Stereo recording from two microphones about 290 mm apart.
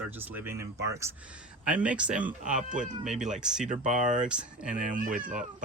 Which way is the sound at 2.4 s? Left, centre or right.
Right.